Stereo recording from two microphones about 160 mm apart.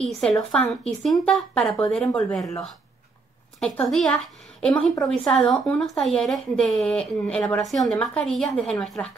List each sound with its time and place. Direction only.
0.2 s a woman's voice: 5° left (ahead or behind)
3.5 s a woman's voice: 5° left (ahead or behind)